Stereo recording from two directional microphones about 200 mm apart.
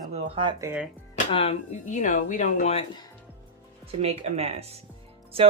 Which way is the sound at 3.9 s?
30° right (ahead or behind).